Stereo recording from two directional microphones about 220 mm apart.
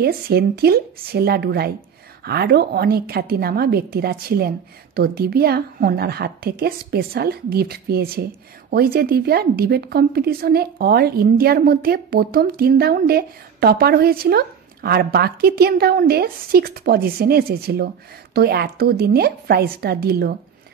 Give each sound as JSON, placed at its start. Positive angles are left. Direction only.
{"t": 0.0, "sound": "a woman's voice", "side_deg": -45}